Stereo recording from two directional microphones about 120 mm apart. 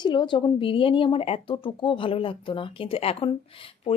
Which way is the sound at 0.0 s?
40° left (ahead or behind).